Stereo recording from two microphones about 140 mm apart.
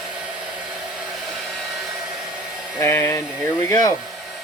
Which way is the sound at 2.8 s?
20° left (ahead or behind).